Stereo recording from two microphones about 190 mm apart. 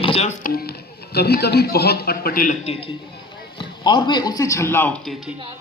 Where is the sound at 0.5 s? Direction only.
55° left (ahead or behind).